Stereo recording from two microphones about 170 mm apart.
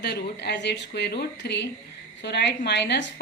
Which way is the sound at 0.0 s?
75° left (ahead or behind).